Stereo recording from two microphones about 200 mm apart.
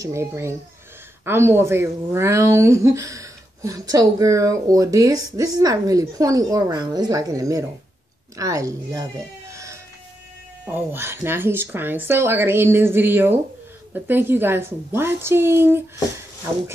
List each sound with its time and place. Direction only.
0.0 s a woman's voice: 15° right (ahead or behind)
9.5 s a sound: 15° right (ahead or behind)
10.6 s a woman's voice: 10° right (ahead or behind)